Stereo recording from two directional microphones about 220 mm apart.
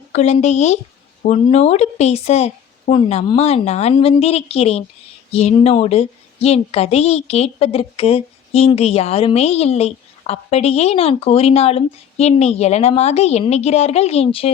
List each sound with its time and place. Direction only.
0.1 s a woman's voice: 30° left (ahead or behind)